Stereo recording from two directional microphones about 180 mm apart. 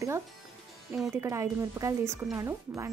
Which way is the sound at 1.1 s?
15° right (ahead or behind).